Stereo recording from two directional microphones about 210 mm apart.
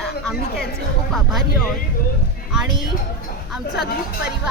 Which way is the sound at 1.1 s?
Centre (ahead or behind).